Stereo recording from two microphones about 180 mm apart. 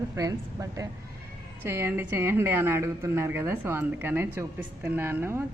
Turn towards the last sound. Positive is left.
turn(degrees=-10)  # may be behind; listen again after turning